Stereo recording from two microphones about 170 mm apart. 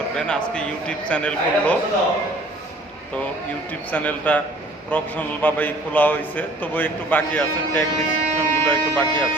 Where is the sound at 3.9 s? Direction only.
10° left (ahead or behind).